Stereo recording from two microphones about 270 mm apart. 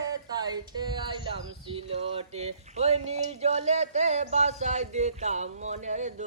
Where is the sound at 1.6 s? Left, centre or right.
Centre.